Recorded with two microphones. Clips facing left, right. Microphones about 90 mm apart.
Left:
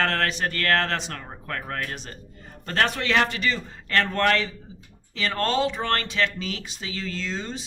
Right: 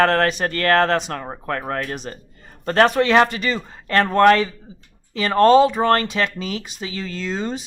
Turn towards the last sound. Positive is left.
turn(degrees=-50)  # may be behind; listen again after turning